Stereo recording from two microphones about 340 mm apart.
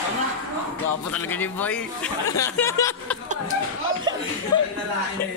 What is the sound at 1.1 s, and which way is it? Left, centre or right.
Speech, centre.